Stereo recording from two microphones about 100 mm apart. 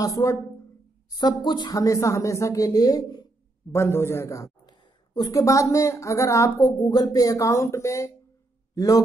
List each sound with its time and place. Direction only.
0.0 s speech: 35° left (ahead or behind)
1.1 s speech: 45° left (ahead or behind)
3.7 s a man's voice: 25° left (ahead or behind)